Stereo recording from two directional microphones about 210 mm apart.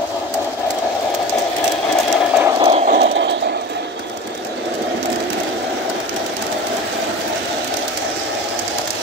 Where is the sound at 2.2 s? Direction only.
5° right (ahead or behind).